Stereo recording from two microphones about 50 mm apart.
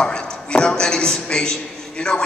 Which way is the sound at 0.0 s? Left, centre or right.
Centre.